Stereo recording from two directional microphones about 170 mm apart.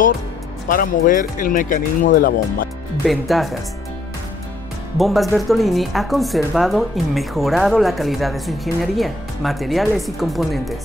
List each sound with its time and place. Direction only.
0.7 s speech: 55° left (ahead or behind)
3.1 s speech: centre (ahead or behind)
4.9 s speech: centre (ahead or behind)